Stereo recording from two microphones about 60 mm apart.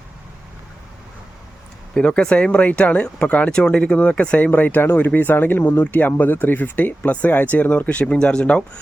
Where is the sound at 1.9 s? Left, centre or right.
Centre.